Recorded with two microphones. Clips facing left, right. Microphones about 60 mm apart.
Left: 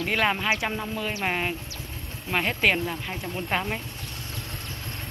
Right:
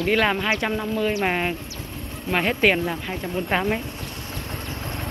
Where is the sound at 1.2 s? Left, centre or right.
Centre.